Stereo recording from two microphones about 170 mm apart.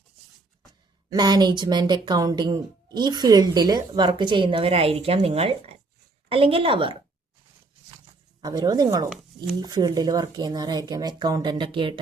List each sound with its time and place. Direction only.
1.1 s a woman's voice: 25° right (ahead or behind)
8.4 s speech: 25° right (ahead or behind)